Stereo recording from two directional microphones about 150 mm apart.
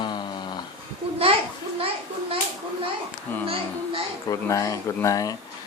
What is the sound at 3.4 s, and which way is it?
Speech, 40° right (ahead or behind).